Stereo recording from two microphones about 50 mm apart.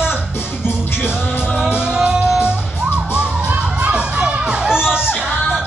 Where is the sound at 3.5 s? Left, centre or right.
Right.